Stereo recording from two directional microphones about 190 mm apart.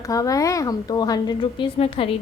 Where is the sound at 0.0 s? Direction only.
20° left (ahead or behind).